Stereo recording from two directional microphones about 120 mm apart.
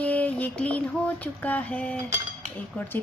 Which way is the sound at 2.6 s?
10° left (ahead or behind).